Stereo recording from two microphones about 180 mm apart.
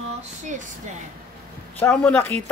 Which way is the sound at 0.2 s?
45° right (ahead or behind).